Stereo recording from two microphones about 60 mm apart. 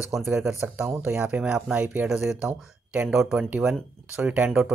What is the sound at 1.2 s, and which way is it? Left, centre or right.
Speech, right.